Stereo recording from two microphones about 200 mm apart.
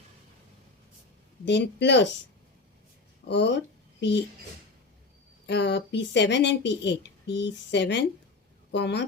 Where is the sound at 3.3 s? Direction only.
60° left (ahead or behind).